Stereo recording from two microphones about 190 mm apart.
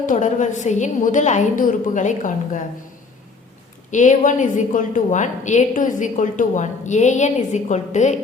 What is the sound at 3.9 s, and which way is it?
A woman's voice, 40° left (ahead or behind).